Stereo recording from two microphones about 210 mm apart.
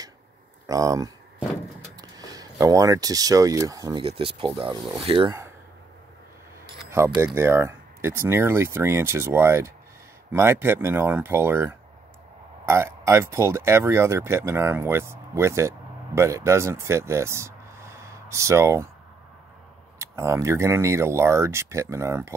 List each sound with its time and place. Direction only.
0.7 s speech: 15° right (ahead or behind)
6.9 s speech: 15° right (ahead or behind)
20.0 s speech: 15° right (ahead or behind)